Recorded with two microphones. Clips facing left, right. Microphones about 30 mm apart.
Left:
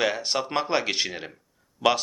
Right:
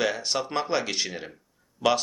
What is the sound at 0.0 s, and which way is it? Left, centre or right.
Speech, centre.